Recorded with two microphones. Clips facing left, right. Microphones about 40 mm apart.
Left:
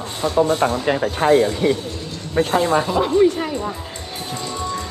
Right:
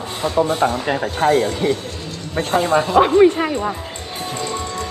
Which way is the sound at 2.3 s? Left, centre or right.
Centre.